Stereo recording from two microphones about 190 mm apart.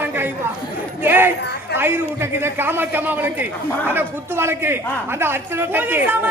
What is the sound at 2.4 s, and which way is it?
A woman's voice, 10° right (ahead or behind).